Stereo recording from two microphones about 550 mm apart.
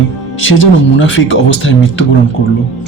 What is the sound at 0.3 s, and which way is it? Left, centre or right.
Speech, left.